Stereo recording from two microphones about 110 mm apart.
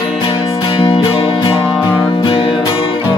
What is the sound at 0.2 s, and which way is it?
Music, 50° left (ahead or behind).